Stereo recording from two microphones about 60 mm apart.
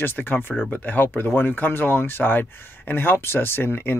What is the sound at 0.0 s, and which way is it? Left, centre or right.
Speech, left.